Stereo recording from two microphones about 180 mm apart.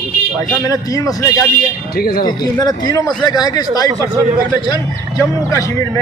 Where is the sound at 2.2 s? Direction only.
20° left (ahead or behind).